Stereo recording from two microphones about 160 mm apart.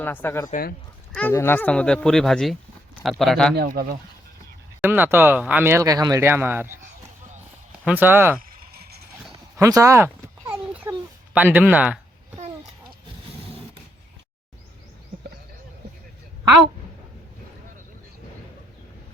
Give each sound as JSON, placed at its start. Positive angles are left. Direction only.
{"t": 0.0, "sound": "speech", "side_deg": 10}
{"t": 3.5, "sound": "speech", "side_deg": -80}
{"t": 4.8, "sound": "speech", "side_deg": -15}
{"t": 7.9, "sound": "speech", "side_deg": -10}
{"t": 8.4, "sound": "a sound", "side_deg": -75}
{"t": 9.6, "sound": "a sound", "side_deg": -20}
{"t": 11.3, "sound": "speech", "side_deg": -10}